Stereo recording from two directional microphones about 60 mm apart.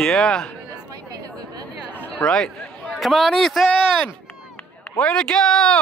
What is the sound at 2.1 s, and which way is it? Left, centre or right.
Speech, centre.